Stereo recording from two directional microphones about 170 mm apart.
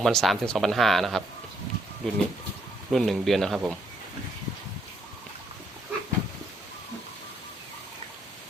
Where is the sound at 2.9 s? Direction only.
Centre (ahead or behind).